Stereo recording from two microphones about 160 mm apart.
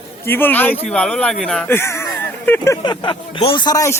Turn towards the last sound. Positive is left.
turn(degrees=20)  # may be behind; listen again after turning